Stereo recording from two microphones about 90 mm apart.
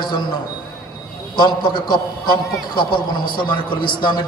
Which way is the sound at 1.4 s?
60° left (ahead or behind).